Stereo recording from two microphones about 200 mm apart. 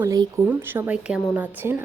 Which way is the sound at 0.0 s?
15° right (ahead or behind).